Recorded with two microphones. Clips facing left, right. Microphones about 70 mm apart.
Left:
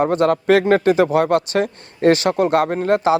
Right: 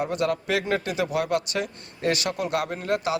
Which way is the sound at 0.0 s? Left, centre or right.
Left.